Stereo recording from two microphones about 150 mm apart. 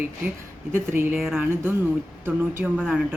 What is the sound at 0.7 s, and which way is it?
Speech, 15° right (ahead or behind).